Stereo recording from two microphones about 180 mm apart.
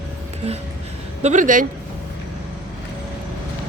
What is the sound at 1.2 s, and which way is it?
Speech, 45° right (ahead or behind).